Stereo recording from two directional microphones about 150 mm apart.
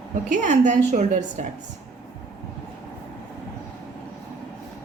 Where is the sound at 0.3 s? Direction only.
55° right (ahead or behind).